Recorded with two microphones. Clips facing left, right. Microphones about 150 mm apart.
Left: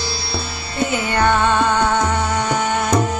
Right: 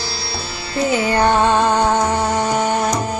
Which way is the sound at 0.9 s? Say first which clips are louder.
Right 2 dB; 30° right (ahead or behind).